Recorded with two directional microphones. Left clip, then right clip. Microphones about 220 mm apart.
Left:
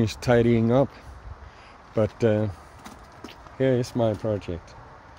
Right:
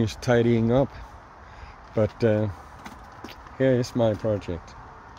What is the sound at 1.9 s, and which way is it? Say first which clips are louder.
Speech: even; 15° left (ahead or behind).